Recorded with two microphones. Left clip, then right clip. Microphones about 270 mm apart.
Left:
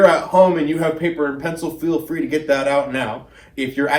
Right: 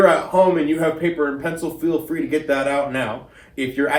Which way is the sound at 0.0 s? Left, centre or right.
Left.